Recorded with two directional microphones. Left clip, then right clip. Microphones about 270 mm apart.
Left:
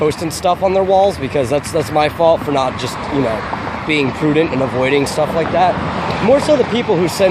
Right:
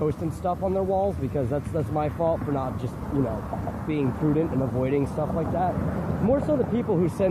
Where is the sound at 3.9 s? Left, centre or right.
Centre.